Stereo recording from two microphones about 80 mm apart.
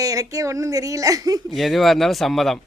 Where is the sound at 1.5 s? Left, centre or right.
Centre.